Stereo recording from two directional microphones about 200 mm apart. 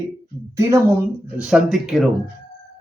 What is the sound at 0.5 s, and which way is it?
Speech, 15° right (ahead or behind).